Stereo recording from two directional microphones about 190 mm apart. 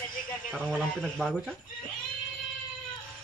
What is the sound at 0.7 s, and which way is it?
Speech, 5° left (ahead or behind).